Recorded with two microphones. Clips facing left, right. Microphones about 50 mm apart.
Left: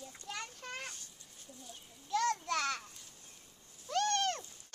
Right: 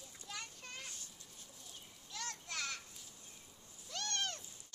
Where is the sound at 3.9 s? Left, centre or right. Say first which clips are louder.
Left 10 dB; left.